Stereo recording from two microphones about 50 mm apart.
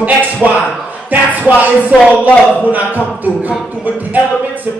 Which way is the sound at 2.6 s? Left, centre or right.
Right.